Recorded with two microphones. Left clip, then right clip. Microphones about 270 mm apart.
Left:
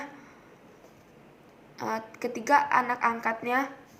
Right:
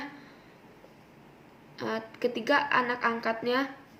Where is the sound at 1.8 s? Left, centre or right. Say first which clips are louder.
Even; centre.